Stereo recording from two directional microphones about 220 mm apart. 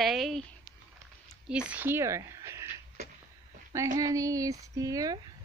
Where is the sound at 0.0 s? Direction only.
Centre (ahead or behind).